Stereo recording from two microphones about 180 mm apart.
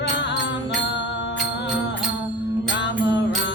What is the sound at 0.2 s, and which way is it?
Music, 80° left.